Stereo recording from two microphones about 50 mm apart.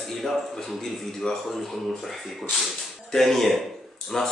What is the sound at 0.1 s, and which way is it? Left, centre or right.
A man's voice, centre.